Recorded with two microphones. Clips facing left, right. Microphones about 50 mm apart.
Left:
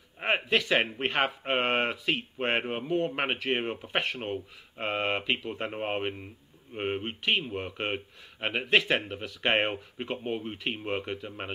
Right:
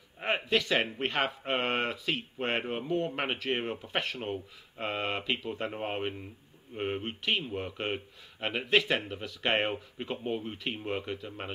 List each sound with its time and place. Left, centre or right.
0.2 s speech: centre